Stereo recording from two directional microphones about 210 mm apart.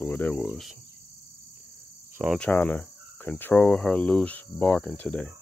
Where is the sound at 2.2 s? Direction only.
Centre (ahead or behind).